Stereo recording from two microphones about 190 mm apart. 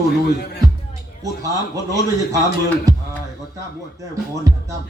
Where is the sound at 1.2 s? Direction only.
15° right (ahead or behind).